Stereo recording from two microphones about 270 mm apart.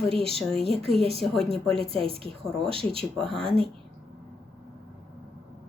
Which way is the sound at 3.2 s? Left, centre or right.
Centre.